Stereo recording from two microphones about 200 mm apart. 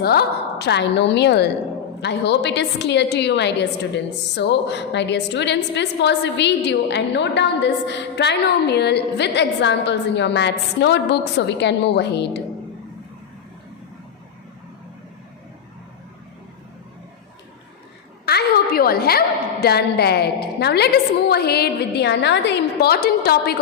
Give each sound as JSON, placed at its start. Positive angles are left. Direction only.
{"t": 0.0, "sound": "a woman's voice", "side_deg": 50}
{"t": 18.3, "sound": "a woman's voice", "side_deg": 50}